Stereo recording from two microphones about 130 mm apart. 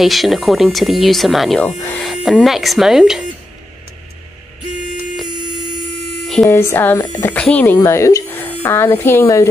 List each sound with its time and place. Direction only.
0.0 s speech: centre (ahead or behind)
1.8 s electric shaver: 15° left (ahead or behind)
2.0 s speech: centre (ahead or behind)
6.2 s a sound: centre (ahead or behind)
6.5 s speech: 20° left (ahead or behind)